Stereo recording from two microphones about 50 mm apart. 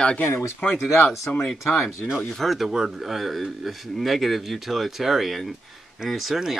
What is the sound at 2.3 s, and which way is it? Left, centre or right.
Speech, centre.